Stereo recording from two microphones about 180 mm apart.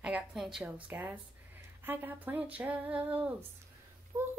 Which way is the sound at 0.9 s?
10° right (ahead or behind).